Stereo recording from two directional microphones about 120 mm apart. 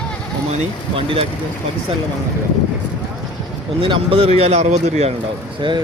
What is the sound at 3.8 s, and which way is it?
A man's voice, 50° right (ahead or behind).